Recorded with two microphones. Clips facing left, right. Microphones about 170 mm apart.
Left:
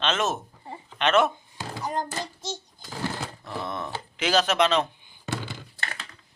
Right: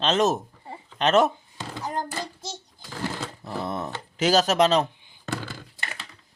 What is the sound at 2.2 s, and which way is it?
Child singing, 10° right (ahead or behind).